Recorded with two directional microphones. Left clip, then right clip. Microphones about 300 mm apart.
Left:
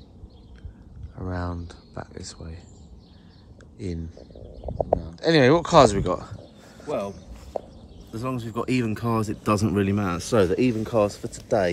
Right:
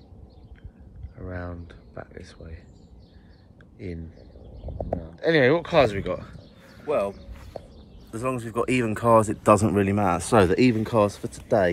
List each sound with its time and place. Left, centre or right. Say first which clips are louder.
1.1 s speech: left 4 dB; centre
3.7 s speech: left 3 dB; centre
5.0 s speech: even; centre
10.3 s speech: right 1 dB; centre